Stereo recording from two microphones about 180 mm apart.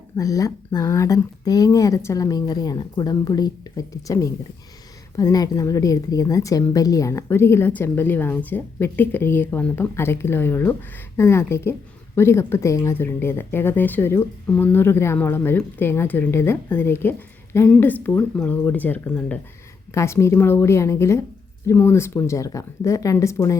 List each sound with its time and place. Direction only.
0.2 s speech: 20° left (ahead or behind)